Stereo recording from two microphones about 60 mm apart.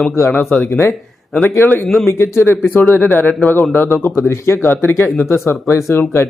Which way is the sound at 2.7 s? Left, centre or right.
Left.